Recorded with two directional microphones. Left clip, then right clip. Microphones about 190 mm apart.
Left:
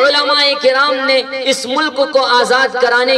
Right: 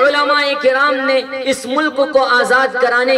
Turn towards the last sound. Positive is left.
turn(degrees=30)  # may be behind; listen again after turning